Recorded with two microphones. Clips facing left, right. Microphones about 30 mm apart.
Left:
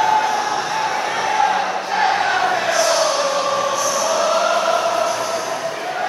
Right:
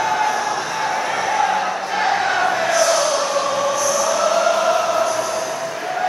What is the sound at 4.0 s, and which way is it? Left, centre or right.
Choir, centre.